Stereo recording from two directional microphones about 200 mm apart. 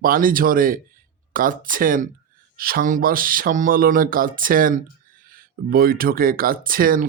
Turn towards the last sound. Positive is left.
turn(degrees=-45)  # may be behind; listen again after turning